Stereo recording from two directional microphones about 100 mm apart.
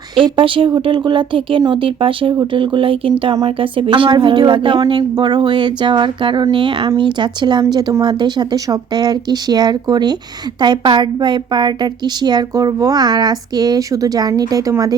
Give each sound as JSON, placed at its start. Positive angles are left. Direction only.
{"t": 0.2, "sound": "a woman's voice", "side_deg": -60}